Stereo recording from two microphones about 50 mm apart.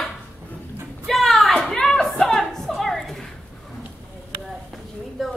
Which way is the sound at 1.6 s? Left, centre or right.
Centre.